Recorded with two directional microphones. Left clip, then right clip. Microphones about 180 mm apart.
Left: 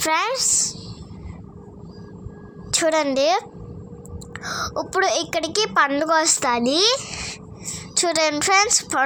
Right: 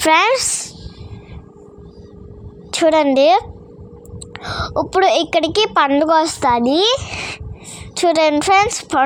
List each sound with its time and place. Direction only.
0.0 s speech: 50° right (ahead or behind)
2.7 s a woman's voice: 35° right (ahead or behind)